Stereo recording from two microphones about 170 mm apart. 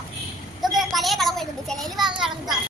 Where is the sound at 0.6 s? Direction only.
Centre (ahead or behind).